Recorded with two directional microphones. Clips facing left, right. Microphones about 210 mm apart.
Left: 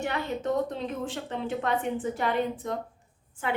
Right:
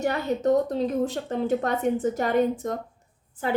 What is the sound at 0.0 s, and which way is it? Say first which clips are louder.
A woman's voice: right 6 dB; 40° right (ahead or behind).